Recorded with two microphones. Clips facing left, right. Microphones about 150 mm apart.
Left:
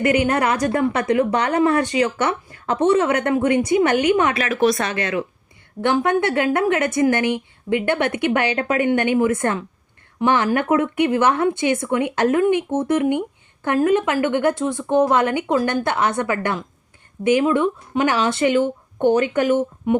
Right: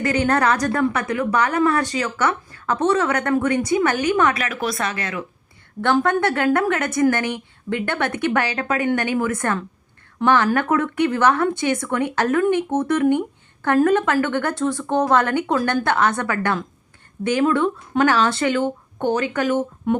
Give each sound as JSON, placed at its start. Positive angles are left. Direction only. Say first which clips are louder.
{"t": 0.2, "sound": "speech", "louder": "even", "side_deg": 15}
{"t": 13.1, "sound": "a woman's voice", "louder": "right 2 dB", "side_deg": 15}